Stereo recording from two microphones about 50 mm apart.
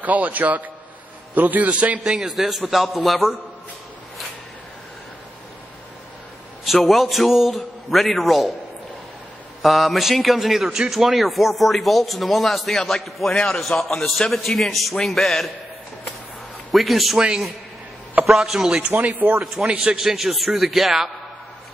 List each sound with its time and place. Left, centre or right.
0.0 s a man's voice: right
2.0 s chopping: centre
2.3 s a man's voice: centre
6.6 s a man's voice: centre
9.6 s a man's voice: centre
16.7 s a man's voice: centre
18.3 s chopping: centre
18.9 s speech: right
20.0 s a man's voice: centre